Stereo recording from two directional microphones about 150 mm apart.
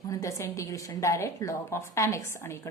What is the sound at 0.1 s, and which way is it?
A woman's voice, 20° left (ahead or behind).